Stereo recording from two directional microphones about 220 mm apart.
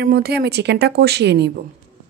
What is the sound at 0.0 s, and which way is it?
Speech, 45° right (ahead or behind).